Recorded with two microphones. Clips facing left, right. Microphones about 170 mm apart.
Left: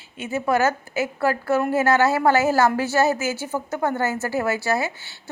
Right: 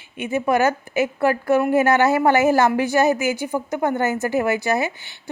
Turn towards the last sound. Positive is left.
turn(degrees=-15)  # may be behind; listen again after turning